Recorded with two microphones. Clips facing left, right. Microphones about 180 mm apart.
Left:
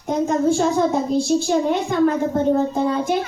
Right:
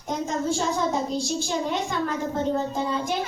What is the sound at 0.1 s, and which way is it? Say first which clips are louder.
A child's voice: left 8 dB; 55° left (ahead or behind).